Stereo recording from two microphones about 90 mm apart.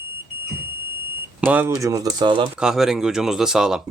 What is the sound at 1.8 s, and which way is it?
Speech, 40° right (ahead or behind).